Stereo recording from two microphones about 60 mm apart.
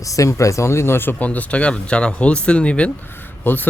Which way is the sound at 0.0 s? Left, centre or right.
Left.